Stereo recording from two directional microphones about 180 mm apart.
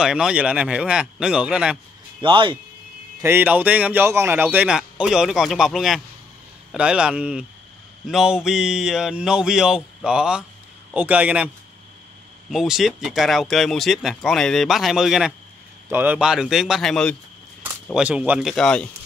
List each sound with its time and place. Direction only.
0.0 s speech: 5° right (ahead or behind)
2.2 s speech: 25° right (ahead or behind)
3.2 s speech: 10° right (ahead or behind); by 17.2 s 5° left (ahead or behind)
17.9 s speech: 5° right (ahead or behind)